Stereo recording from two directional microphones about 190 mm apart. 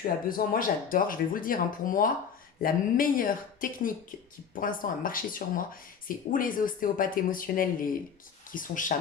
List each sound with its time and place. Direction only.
0.3 s speech: 45° left (ahead or behind)